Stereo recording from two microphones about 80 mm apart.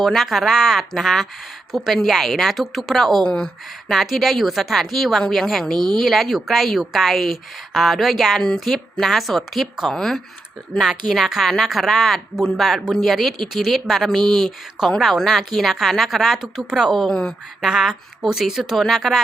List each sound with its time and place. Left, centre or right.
0.0 s speech: centre